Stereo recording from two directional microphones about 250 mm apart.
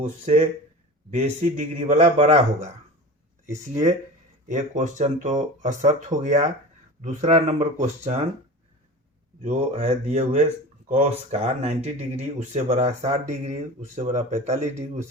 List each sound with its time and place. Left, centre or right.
0.0 s speech: right
9.4 s speech: right